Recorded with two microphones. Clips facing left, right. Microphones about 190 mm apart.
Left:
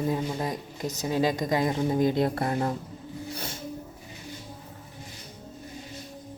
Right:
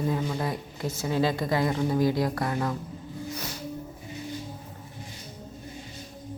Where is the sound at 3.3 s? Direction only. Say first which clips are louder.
Right 1 dB; 30° left (ahead or behind).